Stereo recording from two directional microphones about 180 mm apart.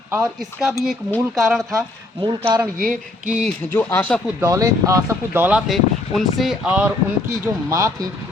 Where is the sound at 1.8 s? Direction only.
25° right (ahead or behind).